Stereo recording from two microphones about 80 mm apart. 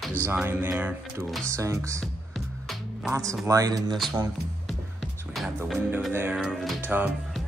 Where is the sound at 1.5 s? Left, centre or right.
Right.